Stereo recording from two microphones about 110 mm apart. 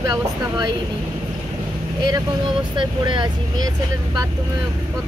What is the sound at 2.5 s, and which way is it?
Speech, 45° right (ahead or behind).